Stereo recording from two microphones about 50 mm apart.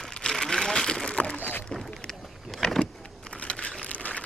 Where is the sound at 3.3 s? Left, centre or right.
Left.